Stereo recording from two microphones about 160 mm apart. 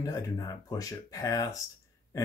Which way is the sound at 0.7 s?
20° left (ahead or behind).